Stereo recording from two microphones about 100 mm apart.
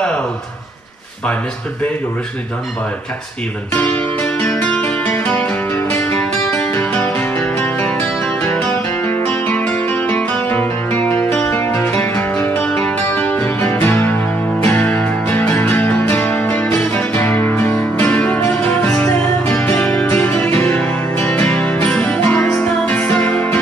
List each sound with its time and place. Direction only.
3.7 s speech: 20° left (ahead or behind)
4.5 s music: 10° left (ahead or behind)
12.6 s music: 10° left (ahead or behind)
13.6 s music: 30° left (ahead or behind)
14.8 s music: 10° left (ahead or behind)